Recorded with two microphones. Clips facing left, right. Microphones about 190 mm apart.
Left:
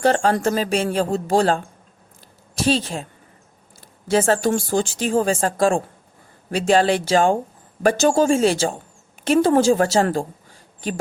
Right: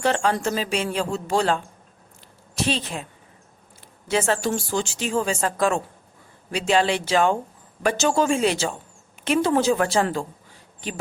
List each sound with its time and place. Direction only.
0.0 s speech: 40° left (ahead or behind)
2.6 s speech: 40° left (ahead or behind)
4.1 s speech: 40° left (ahead or behind)
5.4 s speech: 35° left (ahead or behind)
6.5 s speech: 45° left (ahead or behind)